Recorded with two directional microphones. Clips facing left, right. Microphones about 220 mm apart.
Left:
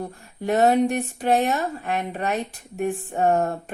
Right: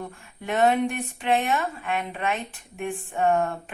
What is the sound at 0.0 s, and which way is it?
Speech, 40° left (ahead or behind).